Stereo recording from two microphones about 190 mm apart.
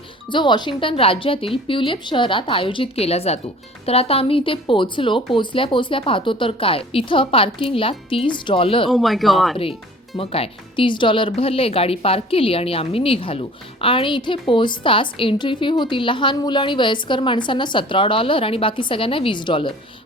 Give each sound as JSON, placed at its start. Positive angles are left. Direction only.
{"t": 0.3, "sound": "speech", "side_deg": 25}
{"t": 8.9, "sound": "speech", "side_deg": 0}
{"t": 10.2, "sound": "speech", "side_deg": 30}